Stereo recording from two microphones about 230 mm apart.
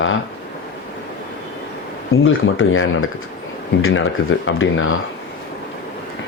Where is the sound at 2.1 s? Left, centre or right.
Left.